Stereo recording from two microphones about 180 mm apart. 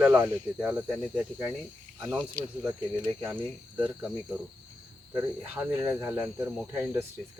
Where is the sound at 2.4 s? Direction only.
50° right (ahead or behind).